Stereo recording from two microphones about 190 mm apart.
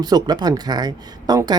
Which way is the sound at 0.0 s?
20° right (ahead or behind).